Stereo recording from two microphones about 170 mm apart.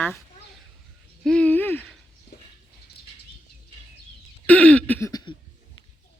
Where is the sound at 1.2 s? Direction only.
5° left (ahead or behind).